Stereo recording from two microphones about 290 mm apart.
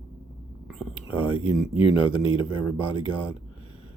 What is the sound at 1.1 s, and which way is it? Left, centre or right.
Speech, centre.